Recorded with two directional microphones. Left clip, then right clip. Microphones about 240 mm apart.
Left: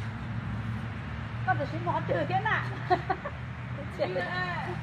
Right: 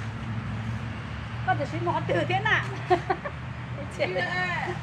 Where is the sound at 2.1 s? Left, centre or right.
Centre.